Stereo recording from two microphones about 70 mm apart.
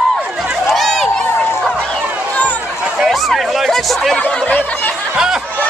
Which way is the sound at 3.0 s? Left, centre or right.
Centre.